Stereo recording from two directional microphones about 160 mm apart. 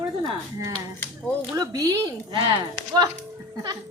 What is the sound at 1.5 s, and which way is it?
Speech, 25° right (ahead or behind).